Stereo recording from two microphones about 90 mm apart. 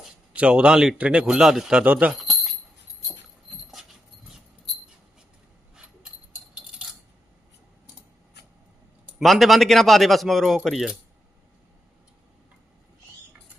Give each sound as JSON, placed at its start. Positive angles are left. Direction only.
{"t": 0.3, "sound": "a man's voice", "side_deg": -10}
{"t": 1.8, "sound": "a man's voice", "side_deg": -15}
{"t": 2.1, "sound": "a sound", "side_deg": 0}
{"t": 3.5, "sound": "dog", "side_deg": 0}
{"t": 5.7, "sound": "a sound", "side_deg": -10}
{"t": 9.1, "sound": "speech", "side_deg": 0}